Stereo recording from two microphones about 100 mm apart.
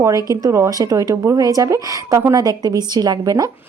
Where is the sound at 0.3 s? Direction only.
35° right (ahead or behind).